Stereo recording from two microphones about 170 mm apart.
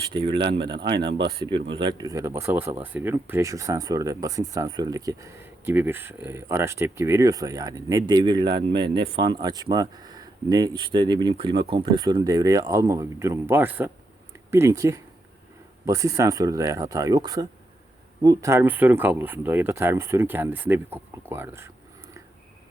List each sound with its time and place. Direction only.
0.1 s speech: 30° right (ahead or behind)
1.0 s speech: 90° right
1.8 s speech: 25° right (ahead or behind)